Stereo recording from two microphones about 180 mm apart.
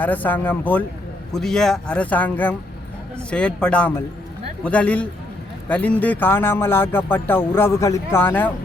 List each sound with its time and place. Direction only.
0.0 s speech: 10° left (ahead or behind)